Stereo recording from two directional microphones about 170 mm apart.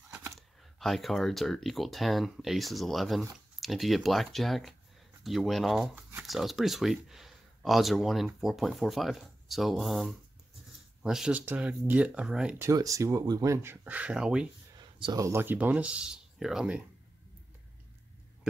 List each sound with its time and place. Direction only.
0.4 s speech: centre (ahead or behind)
14.8 s a sound: 25° right (ahead or behind)
15.2 s speech: 15° right (ahead or behind)